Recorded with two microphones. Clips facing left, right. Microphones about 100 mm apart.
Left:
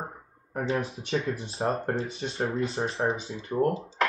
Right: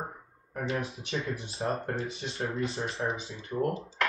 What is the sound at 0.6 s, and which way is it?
Speech, 30° left (ahead or behind).